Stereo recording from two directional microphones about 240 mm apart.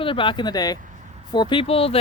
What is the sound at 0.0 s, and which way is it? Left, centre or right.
Speech, left.